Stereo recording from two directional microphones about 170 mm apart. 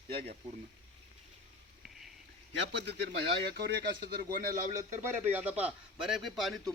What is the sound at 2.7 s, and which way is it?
Speech, 85° right.